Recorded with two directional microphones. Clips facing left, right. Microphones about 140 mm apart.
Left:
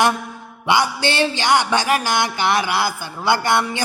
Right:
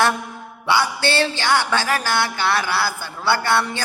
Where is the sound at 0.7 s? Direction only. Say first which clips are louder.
Left 1 dB; 15° left (ahead or behind).